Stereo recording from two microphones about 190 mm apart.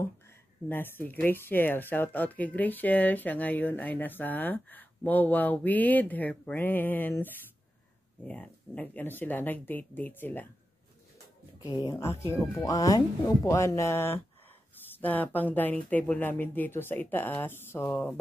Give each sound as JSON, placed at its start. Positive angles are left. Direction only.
{"t": 0.7, "sound": "speech", "side_deg": 10}
{"t": 8.3, "sound": "speech", "side_deg": 10}
{"t": 11.8, "sound": "speech", "side_deg": 15}